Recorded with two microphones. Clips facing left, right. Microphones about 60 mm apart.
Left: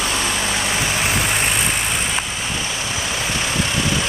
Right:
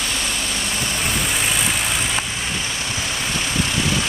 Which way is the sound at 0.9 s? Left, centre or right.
Centre.